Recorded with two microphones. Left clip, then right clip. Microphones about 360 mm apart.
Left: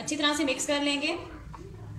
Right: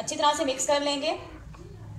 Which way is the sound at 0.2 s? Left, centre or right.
Right.